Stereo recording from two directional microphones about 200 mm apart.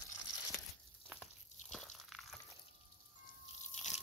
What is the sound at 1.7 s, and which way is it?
Crunch, centre (ahead or behind).